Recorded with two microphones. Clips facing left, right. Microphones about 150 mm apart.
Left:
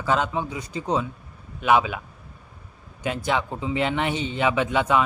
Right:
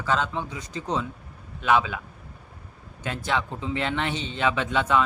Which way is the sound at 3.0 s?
15° left (ahead or behind).